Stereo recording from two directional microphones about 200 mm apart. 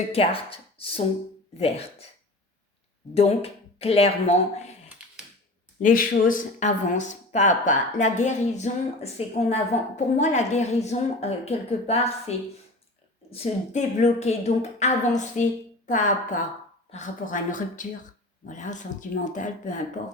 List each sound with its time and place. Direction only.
0.1 s speech: 30° left (ahead or behind)
3.2 s speech: 30° left (ahead or behind)
5.8 s speech: 40° left (ahead or behind)
13.3 s speech: 35° left (ahead or behind)